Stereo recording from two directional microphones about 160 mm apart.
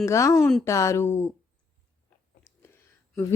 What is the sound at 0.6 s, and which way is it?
Speech, 20° left (ahead or behind).